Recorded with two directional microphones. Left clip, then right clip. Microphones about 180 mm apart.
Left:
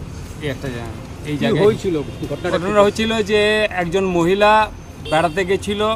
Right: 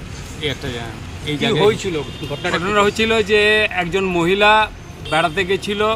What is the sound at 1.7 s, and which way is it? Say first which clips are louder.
Speech: left 1 dB; 60° left (ahead or behind).